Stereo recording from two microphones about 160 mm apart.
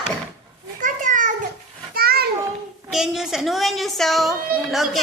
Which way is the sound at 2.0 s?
70° right (ahead or behind).